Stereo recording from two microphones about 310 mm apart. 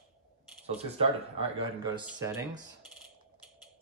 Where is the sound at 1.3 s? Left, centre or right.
Centre.